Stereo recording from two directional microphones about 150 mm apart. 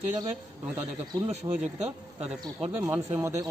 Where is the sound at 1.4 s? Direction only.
30° right (ahead or behind).